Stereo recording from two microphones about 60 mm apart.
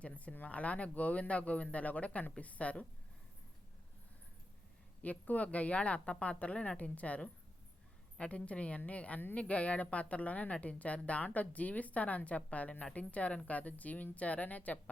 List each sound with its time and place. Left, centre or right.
0.0 s a woman's voice: left
5.0 s a woman's voice: left